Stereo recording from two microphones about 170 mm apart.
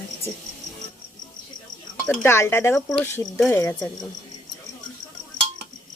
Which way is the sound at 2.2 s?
15° left (ahead or behind).